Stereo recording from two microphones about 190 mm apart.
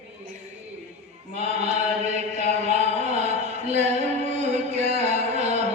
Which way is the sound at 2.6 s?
35° right (ahead or behind).